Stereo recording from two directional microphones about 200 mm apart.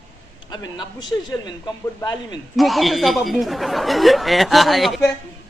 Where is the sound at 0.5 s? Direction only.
20° left (ahead or behind).